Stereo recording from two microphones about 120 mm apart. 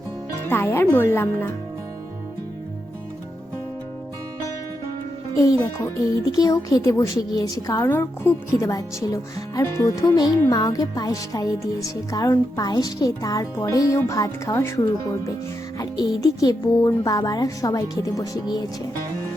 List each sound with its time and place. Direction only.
0.4 s speech: 20° left (ahead or behind)
5.4 s speech: 25° left (ahead or behind)
15.8 s speech: 30° left (ahead or behind)